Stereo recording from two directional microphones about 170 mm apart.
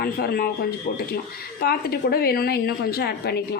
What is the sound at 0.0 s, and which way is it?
Speech, 65° left (ahead or behind).